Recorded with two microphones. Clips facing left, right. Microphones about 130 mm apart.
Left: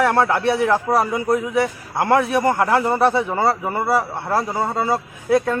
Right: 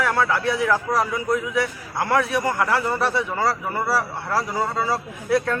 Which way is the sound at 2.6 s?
25° left (ahead or behind).